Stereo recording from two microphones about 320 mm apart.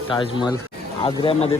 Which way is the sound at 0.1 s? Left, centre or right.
Centre.